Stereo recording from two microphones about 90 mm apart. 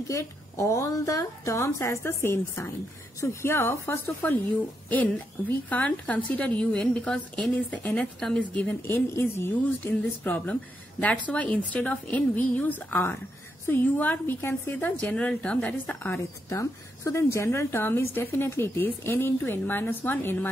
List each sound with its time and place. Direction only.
0.1 s a woman's voice: 35° left (ahead or behind); by 8.5 s 5° left (ahead or behind)
8.5 s a woman's voice: 20° left (ahead or behind)
16.4 s a woman's voice: 35° left (ahead or behind)